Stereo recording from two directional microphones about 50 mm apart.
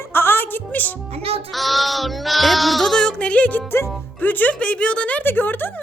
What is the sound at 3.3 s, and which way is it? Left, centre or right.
Speech, left.